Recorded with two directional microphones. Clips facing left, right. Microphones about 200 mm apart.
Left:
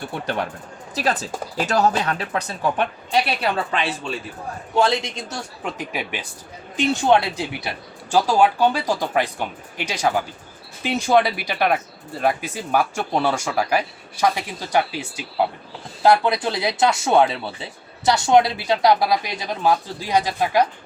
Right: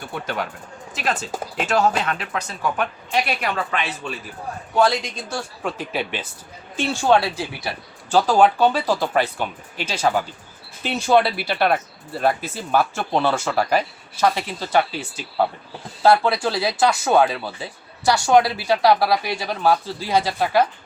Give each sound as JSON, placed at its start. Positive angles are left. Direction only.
{"t": 0.9, "sound": "speech", "side_deg": 35}